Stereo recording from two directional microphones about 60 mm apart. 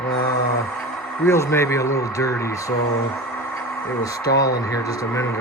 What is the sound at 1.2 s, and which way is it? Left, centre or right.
Speech, left.